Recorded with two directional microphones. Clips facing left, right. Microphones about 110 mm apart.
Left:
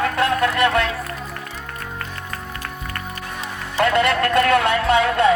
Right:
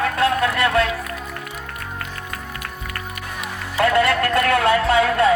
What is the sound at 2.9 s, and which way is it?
Music, 30° left (ahead or behind).